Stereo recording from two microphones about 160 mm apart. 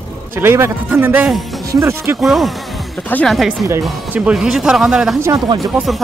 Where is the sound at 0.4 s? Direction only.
15° right (ahead or behind).